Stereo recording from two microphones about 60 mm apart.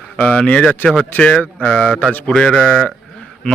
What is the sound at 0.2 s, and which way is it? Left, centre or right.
Speech, left.